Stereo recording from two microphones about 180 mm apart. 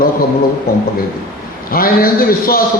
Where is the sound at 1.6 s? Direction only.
55° left (ahead or behind).